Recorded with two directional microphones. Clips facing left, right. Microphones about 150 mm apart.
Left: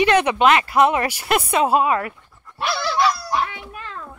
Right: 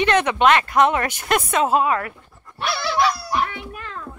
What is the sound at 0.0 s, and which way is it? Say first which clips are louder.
Speech: left 1 dB; 10° left (ahead or behind).